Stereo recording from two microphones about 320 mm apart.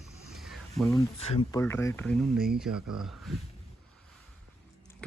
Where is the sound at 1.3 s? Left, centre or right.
Centre.